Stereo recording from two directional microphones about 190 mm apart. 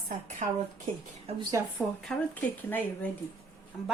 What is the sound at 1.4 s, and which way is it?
Speech, 20° right (ahead or behind).